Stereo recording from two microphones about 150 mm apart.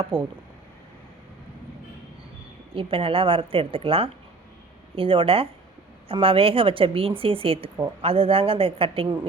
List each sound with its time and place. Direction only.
0.1 s speech: 5° left (ahead or behind)
2.7 s a woman's voice: 35° right (ahead or behind)